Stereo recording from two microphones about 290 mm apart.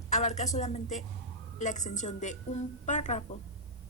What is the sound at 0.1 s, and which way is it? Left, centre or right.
A woman's voice, left.